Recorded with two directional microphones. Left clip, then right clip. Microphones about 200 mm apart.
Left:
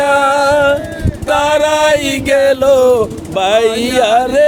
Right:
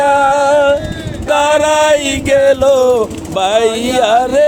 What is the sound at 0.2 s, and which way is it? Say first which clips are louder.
Music: right 1 dB; 5° left (ahead or behind).